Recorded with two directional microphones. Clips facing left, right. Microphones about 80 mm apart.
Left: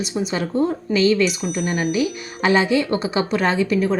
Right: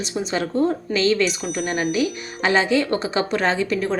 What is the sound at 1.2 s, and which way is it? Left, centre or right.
Speech, centre.